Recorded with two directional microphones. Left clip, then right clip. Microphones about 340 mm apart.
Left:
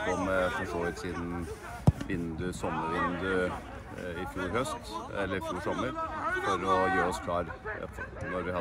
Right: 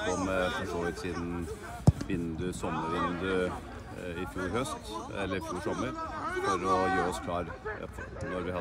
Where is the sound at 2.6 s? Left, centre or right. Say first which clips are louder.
Left 1 dB; left.